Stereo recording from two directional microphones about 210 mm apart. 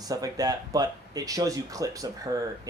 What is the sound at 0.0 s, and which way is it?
Speech, 15° right (ahead or behind).